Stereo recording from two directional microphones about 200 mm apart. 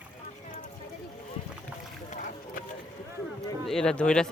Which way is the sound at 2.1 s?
40° left (ahead or behind).